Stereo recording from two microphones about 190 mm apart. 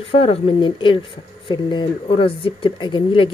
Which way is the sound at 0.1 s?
30° left (ahead or behind).